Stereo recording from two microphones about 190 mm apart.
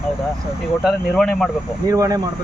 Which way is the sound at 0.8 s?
5° left (ahead or behind).